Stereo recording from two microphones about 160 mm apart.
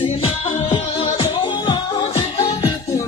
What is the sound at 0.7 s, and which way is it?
Music, 40° left (ahead or behind).